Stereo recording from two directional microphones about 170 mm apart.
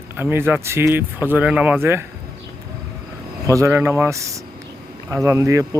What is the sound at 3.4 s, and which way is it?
Speech, 20° right (ahead or behind).